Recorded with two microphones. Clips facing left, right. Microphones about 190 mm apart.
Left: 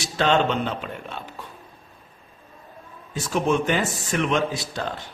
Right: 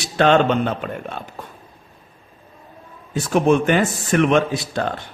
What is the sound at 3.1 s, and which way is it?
Speech, 60° right (ahead or behind).